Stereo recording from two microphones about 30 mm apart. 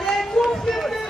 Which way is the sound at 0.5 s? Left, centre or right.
Centre.